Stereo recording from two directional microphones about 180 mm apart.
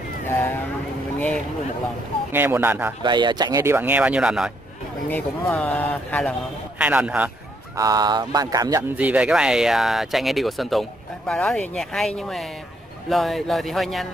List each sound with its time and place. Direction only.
0.3 s vehicle: 15° left (ahead or behind)
2.3 s speech: 10° right (ahead or behind)
3.0 s speech: 25° right (ahead or behind); by 4.5 s 5° right (ahead or behind)
5.1 s speech: 10° left (ahead or behind)
6.8 s speech: 5° right (ahead or behind)
7.7 s speech: 20° right (ahead or behind)
8.9 s speech: 5° right (ahead or behind)